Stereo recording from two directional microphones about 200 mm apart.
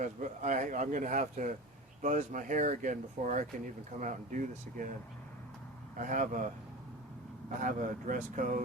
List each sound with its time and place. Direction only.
0.0 s speech: 40° right (ahead or behind)
6.0 s speech: 40° right (ahead or behind)
7.6 s speech: 40° right (ahead or behind)